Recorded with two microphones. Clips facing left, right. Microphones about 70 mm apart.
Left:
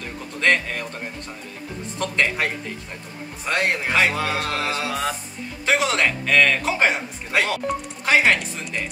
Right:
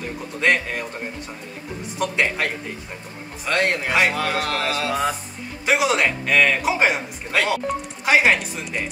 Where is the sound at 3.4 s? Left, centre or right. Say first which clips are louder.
Right 1 dB; centre.